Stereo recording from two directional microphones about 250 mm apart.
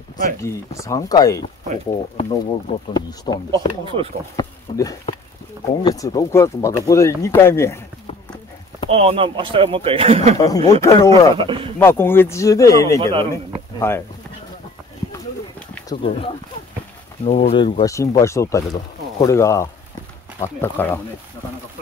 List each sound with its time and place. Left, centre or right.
0.4 s speech: centre
3.5 s speech: right
4.4 s speech: centre
8.9 s speech: right
10.3 s speech: centre
11.3 s speech: right
11.8 s speech: centre
13.0 s speech: centre
13.7 s speech: centre
16.0 s speech: left